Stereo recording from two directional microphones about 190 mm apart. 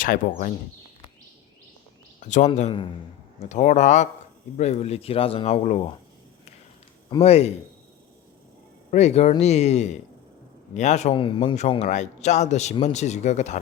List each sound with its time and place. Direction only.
0.0 s speech: 45° left (ahead or behind)
2.2 s a man's voice: 40° left (ahead or behind)
7.2 s a man's voice: 35° left (ahead or behind)
8.9 s a man's voice: 35° left (ahead or behind)